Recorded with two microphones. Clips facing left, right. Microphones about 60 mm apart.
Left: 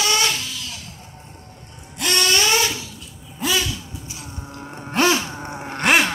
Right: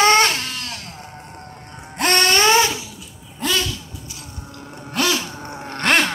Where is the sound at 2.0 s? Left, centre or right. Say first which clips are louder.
Right 3 dB; right.